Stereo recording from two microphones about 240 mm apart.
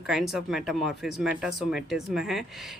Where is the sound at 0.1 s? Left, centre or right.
Centre.